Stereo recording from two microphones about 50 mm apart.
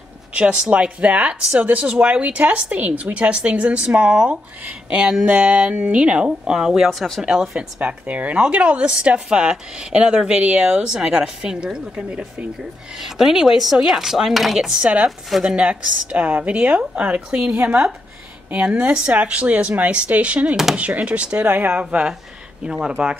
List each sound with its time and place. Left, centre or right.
0.3 s speech: right
6.9 s speech: centre
7.2 s speech: centre
7.8 s speech: right
13.0 s speech: centre
15.4 s speech: right
22.7 s speech: centre